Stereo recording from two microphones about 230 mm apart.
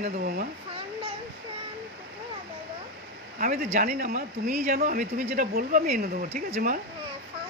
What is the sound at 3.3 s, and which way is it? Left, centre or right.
Speech, right.